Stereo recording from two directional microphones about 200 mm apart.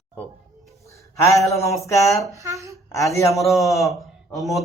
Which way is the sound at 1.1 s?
15° left (ahead or behind).